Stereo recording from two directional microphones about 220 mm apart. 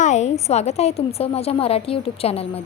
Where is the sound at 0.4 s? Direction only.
30° left (ahead or behind).